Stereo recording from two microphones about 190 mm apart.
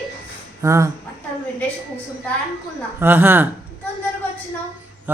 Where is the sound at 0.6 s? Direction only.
15° right (ahead or behind).